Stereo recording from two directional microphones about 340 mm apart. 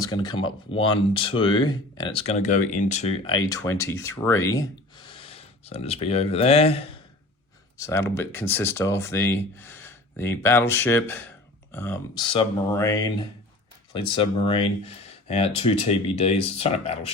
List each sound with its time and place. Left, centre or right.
0.0 s speech: centre